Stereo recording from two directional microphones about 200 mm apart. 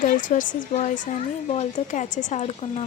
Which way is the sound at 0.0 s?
40° left (ahead or behind).